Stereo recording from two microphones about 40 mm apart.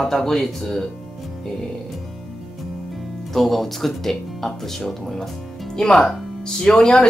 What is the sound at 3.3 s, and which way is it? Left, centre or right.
Speech, centre.